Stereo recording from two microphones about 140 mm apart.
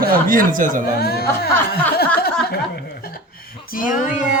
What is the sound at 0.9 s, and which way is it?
Speech, 90° left.